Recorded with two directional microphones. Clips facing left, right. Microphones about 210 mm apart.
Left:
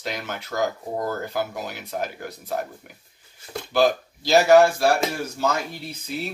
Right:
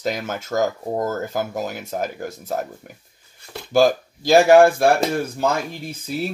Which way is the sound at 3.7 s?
50° right (ahead or behind).